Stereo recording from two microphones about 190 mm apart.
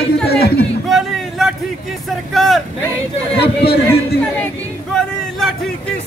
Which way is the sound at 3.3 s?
60° left (ahead or behind).